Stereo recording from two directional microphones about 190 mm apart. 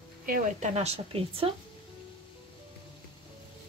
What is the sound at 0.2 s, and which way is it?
Speech, 45° right (ahead or behind).